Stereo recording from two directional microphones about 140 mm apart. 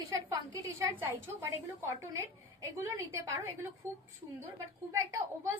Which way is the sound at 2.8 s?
20° right (ahead or behind).